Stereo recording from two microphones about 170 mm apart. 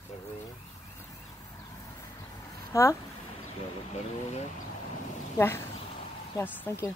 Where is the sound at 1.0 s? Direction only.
20° left (ahead or behind).